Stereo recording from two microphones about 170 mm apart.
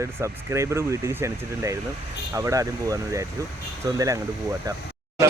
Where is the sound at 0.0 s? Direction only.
15° right (ahead or behind).